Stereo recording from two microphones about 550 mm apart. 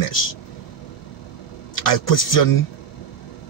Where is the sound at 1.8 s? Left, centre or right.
Left.